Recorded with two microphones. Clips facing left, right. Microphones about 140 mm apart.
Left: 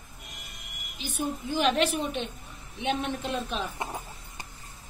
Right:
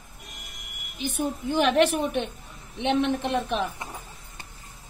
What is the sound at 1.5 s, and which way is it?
A woman's voice, 60° right (ahead or behind).